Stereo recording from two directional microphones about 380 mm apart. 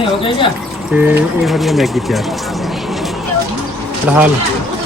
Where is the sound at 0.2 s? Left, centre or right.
Centre.